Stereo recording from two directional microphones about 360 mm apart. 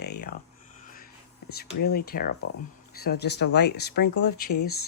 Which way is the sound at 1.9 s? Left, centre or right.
Left.